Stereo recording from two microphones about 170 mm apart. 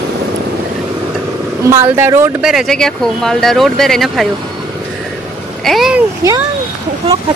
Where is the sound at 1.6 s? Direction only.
15° right (ahead or behind).